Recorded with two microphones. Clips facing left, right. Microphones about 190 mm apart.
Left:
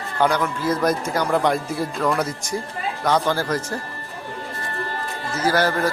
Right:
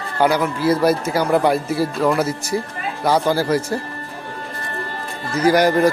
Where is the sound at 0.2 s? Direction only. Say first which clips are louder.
Right 3 dB; 10° right (ahead or behind).